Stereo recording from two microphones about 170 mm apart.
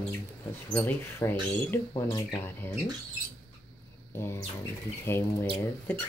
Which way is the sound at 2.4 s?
15° left (ahead or behind).